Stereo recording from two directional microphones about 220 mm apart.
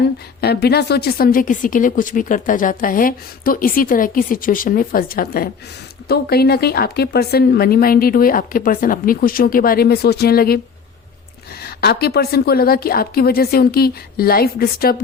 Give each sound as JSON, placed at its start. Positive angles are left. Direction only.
{"t": 0.0, "sound": "a woman's voice", "side_deg": 50}
{"t": 11.6, "sound": "speech", "side_deg": 45}